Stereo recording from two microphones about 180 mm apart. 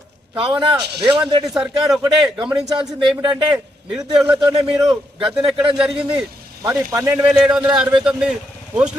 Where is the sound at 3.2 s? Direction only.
25° right (ahead or behind).